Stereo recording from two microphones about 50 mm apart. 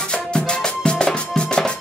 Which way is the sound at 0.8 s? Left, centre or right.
Centre.